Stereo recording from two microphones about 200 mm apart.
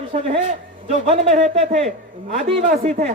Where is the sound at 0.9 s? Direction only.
30° right (ahead or behind).